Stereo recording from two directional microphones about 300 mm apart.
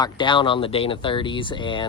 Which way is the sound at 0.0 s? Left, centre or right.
Centre.